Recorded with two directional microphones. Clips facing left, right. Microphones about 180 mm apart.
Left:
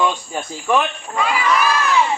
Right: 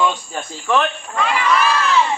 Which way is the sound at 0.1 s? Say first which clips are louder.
Left 1 dB; 10° left (ahead or behind).